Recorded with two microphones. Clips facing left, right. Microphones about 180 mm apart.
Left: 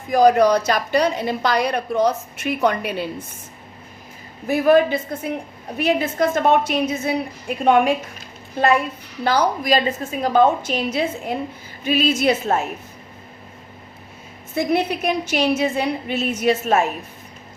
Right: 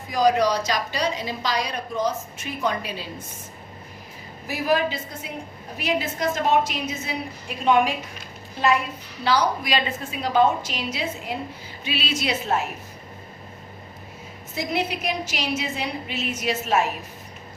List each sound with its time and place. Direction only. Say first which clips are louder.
0.1 s a woman's voice: left 6 dB; 55° left (ahead or behind)
4.4 s a woman's voice: left 8 dB; 55° left (ahead or behind)
9.2 s a woman's voice: left 3 dB; 50° left (ahead or behind)
14.5 s a woman's voice: left 6 dB; 55° left (ahead or behind)